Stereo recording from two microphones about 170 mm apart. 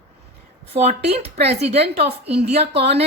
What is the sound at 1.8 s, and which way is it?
Speech, 70° right (ahead or behind).